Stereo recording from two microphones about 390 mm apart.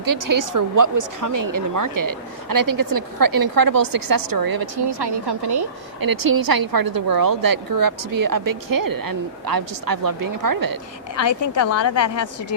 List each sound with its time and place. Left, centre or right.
0.0 s speech: right
5.5 s speech: right
11.7 s a woman's voice: left